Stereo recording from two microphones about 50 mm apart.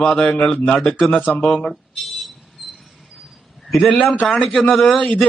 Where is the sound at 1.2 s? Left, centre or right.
Left.